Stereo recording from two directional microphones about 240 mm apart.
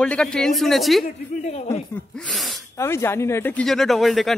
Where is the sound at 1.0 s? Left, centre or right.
Left.